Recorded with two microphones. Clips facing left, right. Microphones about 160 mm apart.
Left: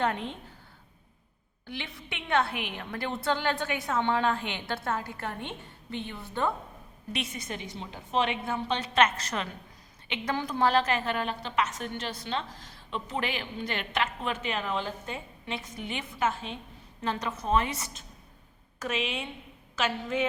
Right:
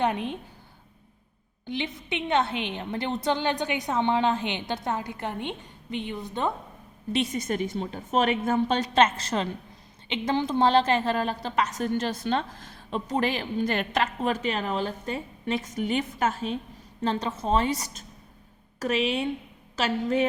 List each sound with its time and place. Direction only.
0.0 s a woman's voice: 15° right (ahead or behind)
1.6 s a woman's voice: 20° right (ahead or behind)
7.1 s a woman's voice: 35° right (ahead or behind)
9.0 s a woman's voice: 30° right (ahead or behind)
17.0 s a woman's voice: 30° right (ahead or behind)